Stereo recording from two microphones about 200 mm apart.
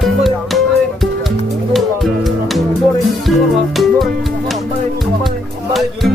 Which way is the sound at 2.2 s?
Centre (ahead or behind).